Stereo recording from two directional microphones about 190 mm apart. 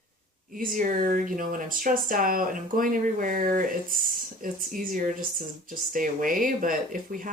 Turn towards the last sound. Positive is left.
turn(degrees=-45)  # may be behind; listen again after turning